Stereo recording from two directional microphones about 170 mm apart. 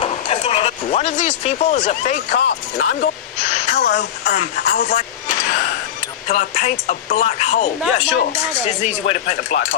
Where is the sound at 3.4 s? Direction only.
45° left (ahead or behind).